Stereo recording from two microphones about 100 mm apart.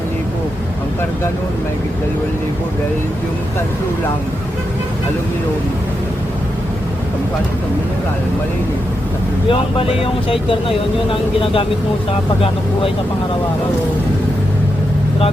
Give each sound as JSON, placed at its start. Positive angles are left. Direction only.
{"t": 9.5, "sound": "speech", "side_deg": 65}